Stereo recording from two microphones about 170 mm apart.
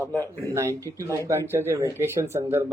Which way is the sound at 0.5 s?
15° right (ahead or behind).